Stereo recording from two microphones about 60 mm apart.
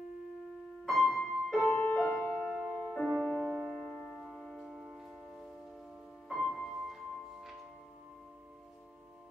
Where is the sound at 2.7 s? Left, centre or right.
Centre.